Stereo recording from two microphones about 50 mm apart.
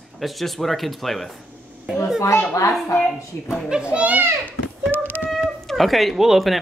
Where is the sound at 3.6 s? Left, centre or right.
Centre.